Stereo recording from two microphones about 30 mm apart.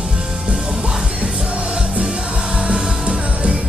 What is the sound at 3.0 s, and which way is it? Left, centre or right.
Music, right.